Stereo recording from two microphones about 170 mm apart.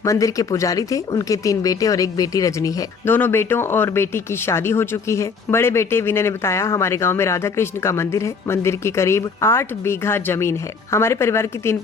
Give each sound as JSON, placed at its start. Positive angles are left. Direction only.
{"t": 0.0, "sound": "speech", "side_deg": 20}